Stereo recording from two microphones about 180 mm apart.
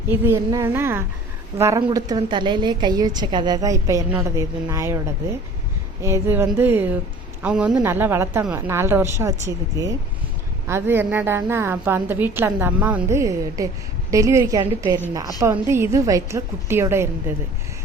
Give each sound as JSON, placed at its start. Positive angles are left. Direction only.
{"t": 0.1, "sound": "a woman's voice", "side_deg": -15}
{"t": 6.0, "sound": "a woman's voice", "side_deg": -15}